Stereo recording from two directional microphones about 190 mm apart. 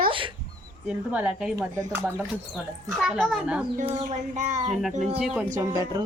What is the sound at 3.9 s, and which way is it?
Child singing, 35° right (ahead or behind).